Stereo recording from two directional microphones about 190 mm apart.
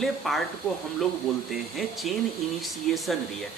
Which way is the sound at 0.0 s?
Centre (ahead or behind).